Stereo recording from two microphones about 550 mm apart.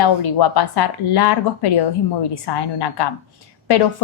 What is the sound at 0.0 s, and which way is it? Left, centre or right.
A woman's voice, left.